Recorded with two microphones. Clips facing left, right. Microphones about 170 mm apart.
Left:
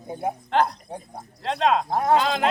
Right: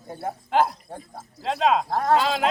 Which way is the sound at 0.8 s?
15° left (ahead or behind).